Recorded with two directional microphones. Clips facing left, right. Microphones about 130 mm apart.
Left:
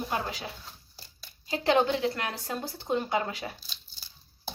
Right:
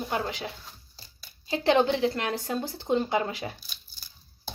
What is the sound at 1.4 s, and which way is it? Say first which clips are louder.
Speech: right 2 dB; 30° right (ahead or behind).